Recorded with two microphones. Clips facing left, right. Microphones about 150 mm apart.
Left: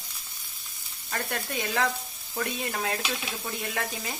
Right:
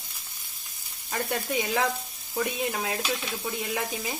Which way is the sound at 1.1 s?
10° right (ahead or behind).